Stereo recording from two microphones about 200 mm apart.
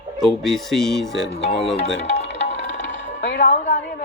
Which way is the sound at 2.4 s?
65° left (ahead or behind).